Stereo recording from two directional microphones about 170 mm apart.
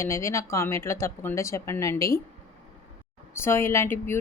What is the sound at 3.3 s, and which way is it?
Speech, 15° left (ahead or behind).